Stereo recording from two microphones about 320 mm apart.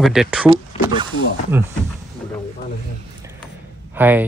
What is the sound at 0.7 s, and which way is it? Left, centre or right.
Snake, centre.